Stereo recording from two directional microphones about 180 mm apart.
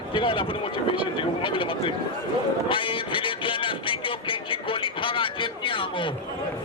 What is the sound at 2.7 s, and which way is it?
Vehicle, 30° left (ahead or behind).